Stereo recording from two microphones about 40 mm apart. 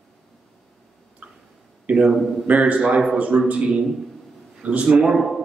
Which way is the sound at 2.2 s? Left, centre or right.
Centre.